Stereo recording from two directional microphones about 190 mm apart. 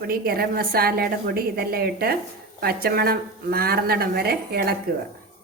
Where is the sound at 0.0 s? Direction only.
55° right (ahead or behind).